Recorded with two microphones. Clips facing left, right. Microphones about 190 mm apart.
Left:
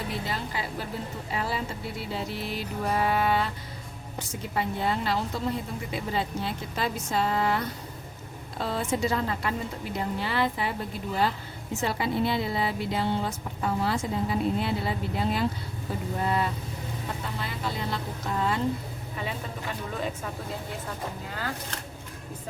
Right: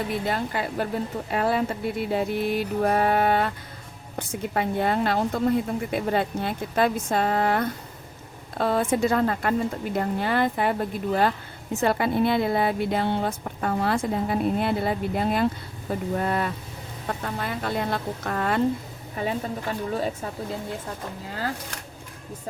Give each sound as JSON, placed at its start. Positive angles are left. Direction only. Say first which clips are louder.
{"t": 0.3, "sound": "a woman's voice", "louder": "right 6 dB", "side_deg": -55}
{"t": 1.3, "sound": "music", "louder": "right 7 dB", "side_deg": -55}
{"t": 4.2, "sound": "a woman's voice", "louder": "right 4 dB", "side_deg": -55}
{"t": 15.9, "sound": "music", "louder": "right 5 dB", "side_deg": -50}
{"t": 16.2, "sound": "a woman's voice", "louder": "right 1 dB", "side_deg": -55}
{"t": 19.9, "sound": "speech", "louder": "right 5 dB", "side_deg": -40}